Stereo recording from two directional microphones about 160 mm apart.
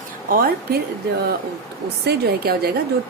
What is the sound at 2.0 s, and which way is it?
Music, 80° right.